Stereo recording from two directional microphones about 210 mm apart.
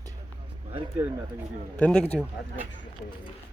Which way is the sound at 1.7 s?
5° left (ahead or behind).